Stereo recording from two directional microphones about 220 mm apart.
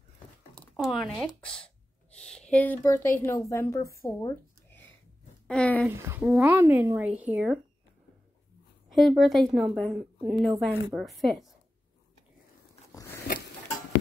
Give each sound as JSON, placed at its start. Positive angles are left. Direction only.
{"t": 0.6, "sound": "speech", "side_deg": 0}
{"t": 2.1, "sound": "a sound", "side_deg": 5}
{"t": 2.5, "sound": "a woman's voice", "side_deg": 5}
{"t": 4.2, "sound": "a sound", "side_deg": 10}
{"t": 5.5, "sound": "a woman's voice", "side_deg": 5}
{"t": 5.9, "sound": "speech", "side_deg": -10}
{"t": 8.9, "sound": "a woman's voice", "side_deg": 0}
{"t": 13.3, "sound": "tick-tock", "side_deg": 45}